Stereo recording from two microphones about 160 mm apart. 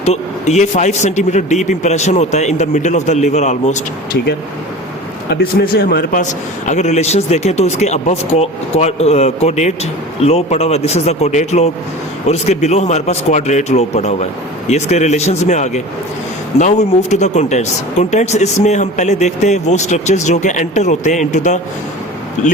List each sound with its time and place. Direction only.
0.0 s speech: 45° left (ahead or behind)
5.3 s speech: 75° left (ahead or behind)
6.7 s speech: 45° left (ahead or behind)